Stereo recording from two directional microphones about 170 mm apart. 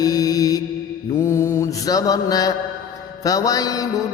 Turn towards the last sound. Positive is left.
turn(degrees=20)  # may be behind; listen again after turning